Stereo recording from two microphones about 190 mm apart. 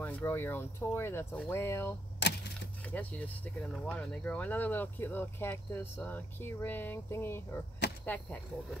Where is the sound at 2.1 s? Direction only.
60° left (ahead or behind).